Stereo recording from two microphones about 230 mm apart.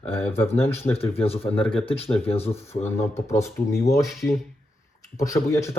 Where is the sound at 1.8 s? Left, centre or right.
Left.